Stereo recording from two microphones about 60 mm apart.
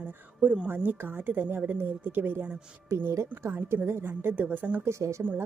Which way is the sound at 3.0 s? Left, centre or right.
Right.